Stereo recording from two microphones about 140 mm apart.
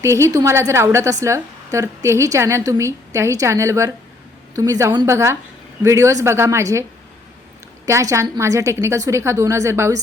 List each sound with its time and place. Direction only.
0.0 s a woman's voice: 20° right (ahead or behind)
7.9 s a woman's voice: 20° right (ahead or behind)